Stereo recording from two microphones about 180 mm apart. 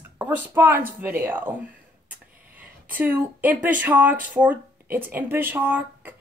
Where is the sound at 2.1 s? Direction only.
10° right (ahead or behind).